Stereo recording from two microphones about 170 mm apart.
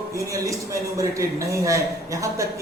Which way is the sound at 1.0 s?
20° right (ahead or behind).